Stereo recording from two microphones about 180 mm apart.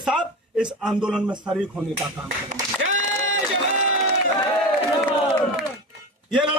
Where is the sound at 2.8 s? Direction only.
90° right.